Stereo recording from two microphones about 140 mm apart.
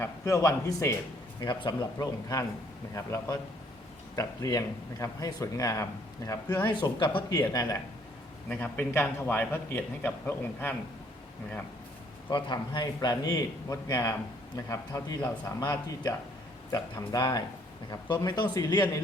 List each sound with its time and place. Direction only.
0.0 s a man's voice: 20° left (ahead or behind)
6.7 s speech: 35° left (ahead or behind)
8.4 s a man's voice: 10° left (ahead or behind)
12.3 s a man's voice: 30° left (ahead or behind)